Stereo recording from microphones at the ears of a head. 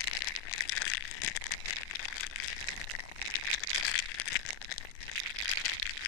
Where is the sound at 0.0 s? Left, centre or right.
Left.